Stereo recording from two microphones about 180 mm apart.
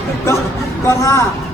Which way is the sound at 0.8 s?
15° left (ahead or behind).